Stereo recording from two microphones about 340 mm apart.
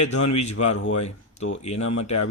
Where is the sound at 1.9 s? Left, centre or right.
Left.